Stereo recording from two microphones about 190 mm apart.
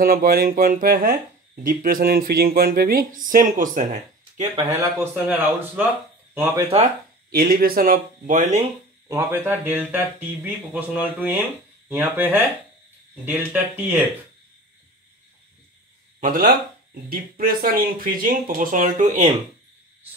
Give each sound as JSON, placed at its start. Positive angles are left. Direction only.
{"t": 0.0, "sound": "speech", "side_deg": -50}
{"t": 4.6, "sound": "speech", "side_deg": -15}
{"t": 7.2, "sound": "speech", "side_deg": -55}
{"t": 9.1, "sound": "speech", "side_deg": -10}
{"t": 16.2, "sound": "speech", "side_deg": -45}